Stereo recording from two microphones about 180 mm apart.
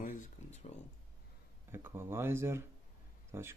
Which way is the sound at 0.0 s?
50° left (ahead or behind).